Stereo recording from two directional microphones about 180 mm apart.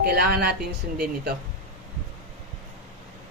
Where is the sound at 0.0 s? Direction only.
60° right (ahead or behind).